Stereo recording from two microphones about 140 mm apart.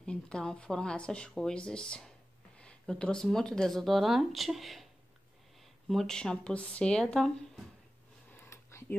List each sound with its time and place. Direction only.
0.0 s speech: 5° left (ahead or behind)
5.9 s speech: 5° left (ahead or behind)
8.3 s a sound: 15° left (ahead or behind)